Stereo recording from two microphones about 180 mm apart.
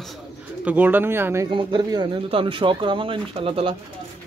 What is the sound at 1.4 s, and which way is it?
Speech, 25° right (ahead or behind).